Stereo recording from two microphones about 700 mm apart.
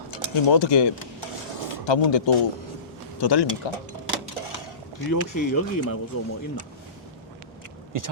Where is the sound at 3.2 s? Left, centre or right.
Left.